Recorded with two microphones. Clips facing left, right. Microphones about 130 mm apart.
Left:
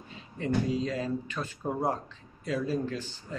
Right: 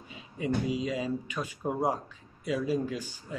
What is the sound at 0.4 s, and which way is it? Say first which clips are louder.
Speech: left 1 dB; 10° right (ahead or behind).